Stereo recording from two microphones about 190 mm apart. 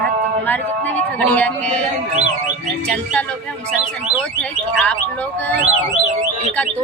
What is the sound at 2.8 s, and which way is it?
Speech, 5° left (ahead or behind).